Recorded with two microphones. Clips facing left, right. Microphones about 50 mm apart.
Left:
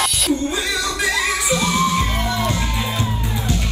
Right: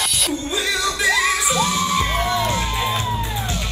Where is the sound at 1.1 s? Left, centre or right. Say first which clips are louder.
Right 3 dB; right.